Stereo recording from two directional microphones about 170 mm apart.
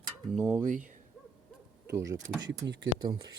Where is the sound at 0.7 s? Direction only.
50° right (ahead or behind).